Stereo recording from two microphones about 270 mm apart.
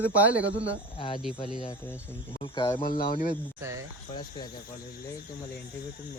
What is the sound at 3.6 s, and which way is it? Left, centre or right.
Speech, centre.